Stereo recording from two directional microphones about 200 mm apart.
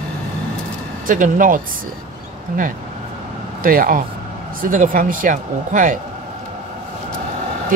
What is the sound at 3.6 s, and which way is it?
Speech, 45° right (ahead or behind).